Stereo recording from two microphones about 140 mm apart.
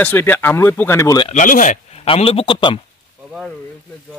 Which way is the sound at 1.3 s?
65° left (ahead or behind).